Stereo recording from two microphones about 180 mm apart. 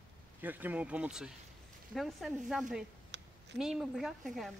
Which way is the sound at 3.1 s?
80° right.